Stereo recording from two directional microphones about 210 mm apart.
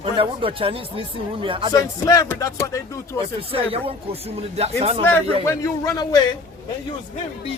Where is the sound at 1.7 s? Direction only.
15° left (ahead or behind).